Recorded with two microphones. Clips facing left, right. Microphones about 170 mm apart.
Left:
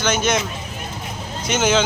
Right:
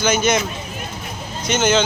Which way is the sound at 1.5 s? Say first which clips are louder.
Right 1 dB; 5° left (ahead or behind).